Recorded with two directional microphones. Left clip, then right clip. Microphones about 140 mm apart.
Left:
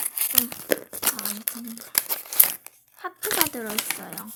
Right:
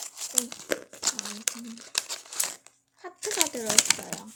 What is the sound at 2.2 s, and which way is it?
Crumpling, 40° left (ahead or behind).